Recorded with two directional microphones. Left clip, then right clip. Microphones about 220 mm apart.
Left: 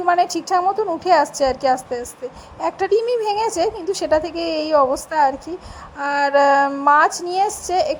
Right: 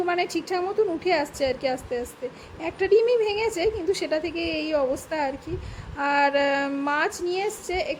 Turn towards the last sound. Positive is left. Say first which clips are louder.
# left 8 dB
turn(degrees=15)  # may be behind; listen again after turning